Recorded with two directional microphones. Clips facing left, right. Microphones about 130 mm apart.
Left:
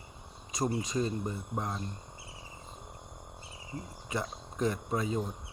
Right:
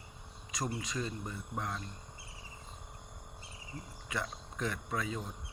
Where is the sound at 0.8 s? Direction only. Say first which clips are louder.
Left 7 dB; 40° left (ahead or behind).